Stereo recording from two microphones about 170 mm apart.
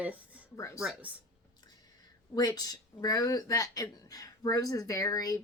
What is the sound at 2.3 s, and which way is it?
Speech, 25° left (ahead or behind).